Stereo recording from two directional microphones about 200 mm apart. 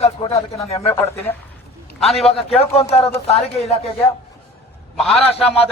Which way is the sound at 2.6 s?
30° left (ahead or behind).